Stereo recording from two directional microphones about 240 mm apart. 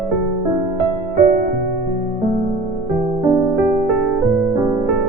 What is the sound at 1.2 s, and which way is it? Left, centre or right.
Music, right.